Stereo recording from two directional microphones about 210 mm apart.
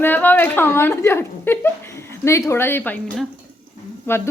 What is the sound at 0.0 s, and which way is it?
A woman's voice, 10° left (ahead or behind).